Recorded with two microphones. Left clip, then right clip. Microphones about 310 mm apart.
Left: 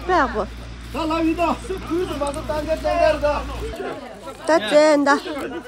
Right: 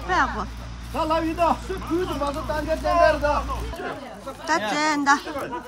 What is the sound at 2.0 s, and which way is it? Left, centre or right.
Speech, right.